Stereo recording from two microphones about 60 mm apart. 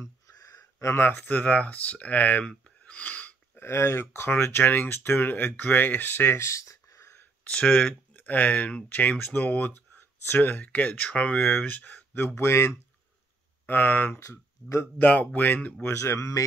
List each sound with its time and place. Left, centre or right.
0.4 s a sound: left
1.2 s speech: left
2.6 s a sound: left
3.6 s speech: left
7.4 s speech: centre
11.4 s speech: left
12.4 s speech: left
13.7 s speech: left
14.1 s speech: left
15.0 s speech: left
15.9 s speech: left